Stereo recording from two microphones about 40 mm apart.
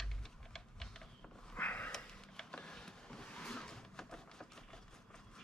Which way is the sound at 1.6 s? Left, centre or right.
Left.